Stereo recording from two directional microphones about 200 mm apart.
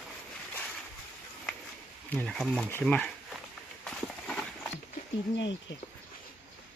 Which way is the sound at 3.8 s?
5° left (ahead or behind).